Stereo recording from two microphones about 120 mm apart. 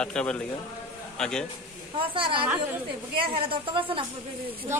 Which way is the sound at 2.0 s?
45° right (ahead or behind).